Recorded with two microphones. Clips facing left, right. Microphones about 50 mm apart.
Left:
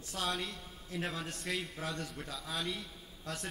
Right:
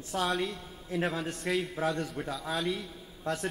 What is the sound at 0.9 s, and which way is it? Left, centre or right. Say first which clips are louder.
Speech: right 7 dB; centre.